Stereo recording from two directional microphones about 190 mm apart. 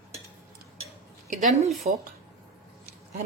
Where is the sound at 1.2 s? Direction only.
35° right (ahead or behind).